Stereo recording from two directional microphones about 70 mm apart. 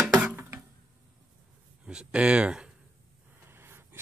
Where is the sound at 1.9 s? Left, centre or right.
Centre.